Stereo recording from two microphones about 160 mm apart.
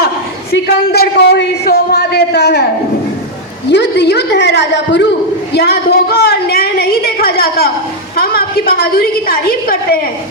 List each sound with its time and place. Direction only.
0.9 s a man's voice: 90° left
3.7 s a man's voice: 90° left; by 10.0 s 70° left (ahead or behind)